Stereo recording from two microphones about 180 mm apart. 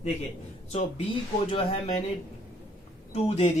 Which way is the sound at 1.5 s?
35° left (ahead or behind).